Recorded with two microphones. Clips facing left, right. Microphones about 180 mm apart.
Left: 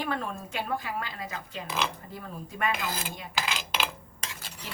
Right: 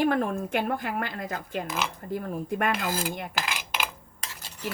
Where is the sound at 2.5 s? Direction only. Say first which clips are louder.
Right 3 dB; 55° right (ahead or behind).